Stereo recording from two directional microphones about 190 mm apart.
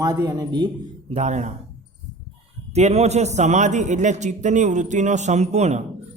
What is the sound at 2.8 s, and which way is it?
A man's voice, 35° right (ahead or behind).